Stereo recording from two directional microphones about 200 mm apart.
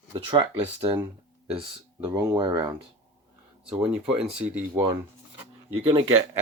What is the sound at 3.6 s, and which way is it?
Speech, 5° right (ahead or behind).